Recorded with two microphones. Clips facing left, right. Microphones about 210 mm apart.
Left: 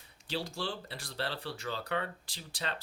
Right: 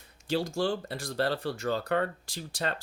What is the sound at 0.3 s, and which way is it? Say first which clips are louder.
Speech: right 9 dB; 45° right (ahead or behind).